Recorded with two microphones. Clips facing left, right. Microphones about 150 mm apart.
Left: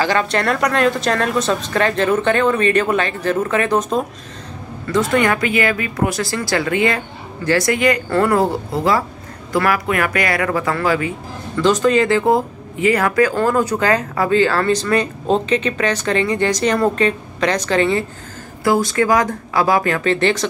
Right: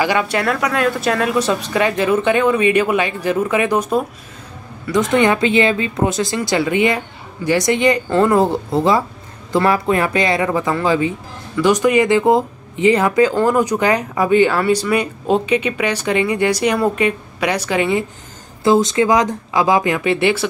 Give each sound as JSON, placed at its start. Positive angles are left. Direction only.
{"t": 0.0, "sound": "speech", "side_deg": -10}
{"t": 18.6, "sound": "speech", "side_deg": -20}